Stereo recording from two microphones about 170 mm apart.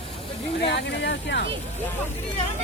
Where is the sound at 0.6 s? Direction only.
90° left.